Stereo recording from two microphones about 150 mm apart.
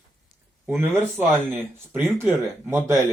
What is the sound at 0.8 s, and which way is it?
Speech, 15° right (ahead or behind).